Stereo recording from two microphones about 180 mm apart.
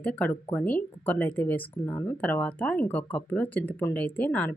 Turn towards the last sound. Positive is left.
turn(degrees=10)  # may be behind; listen again after turning